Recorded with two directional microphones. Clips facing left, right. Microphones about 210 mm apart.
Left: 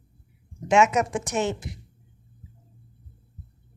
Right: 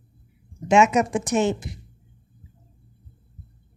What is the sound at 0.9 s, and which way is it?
Speech, 30° right (ahead or behind).